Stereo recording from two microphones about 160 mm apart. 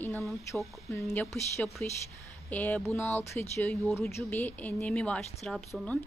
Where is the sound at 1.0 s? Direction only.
5° left (ahead or behind).